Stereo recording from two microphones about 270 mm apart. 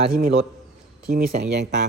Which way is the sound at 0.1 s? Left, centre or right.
Right.